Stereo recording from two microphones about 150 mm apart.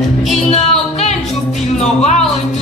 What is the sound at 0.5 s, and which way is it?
Music, 45° left (ahead or behind).